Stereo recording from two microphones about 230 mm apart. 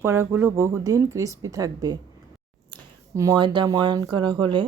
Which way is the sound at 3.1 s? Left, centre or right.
Centre.